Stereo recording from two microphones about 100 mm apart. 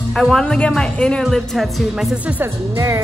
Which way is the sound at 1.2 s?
Centre (ahead or behind).